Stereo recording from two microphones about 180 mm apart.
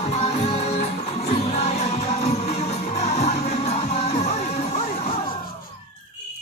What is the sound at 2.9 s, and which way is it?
Music, 35° left (ahead or behind).